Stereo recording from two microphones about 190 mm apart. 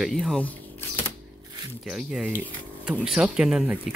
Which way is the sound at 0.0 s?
Centre (ahead or behind).